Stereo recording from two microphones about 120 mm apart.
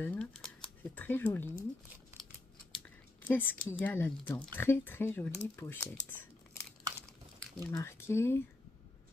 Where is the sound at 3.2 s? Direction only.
15° left (ahead or behind).